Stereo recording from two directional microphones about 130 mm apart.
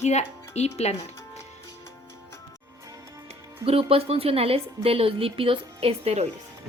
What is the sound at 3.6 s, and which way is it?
Speech, 45° right (ahead or behind).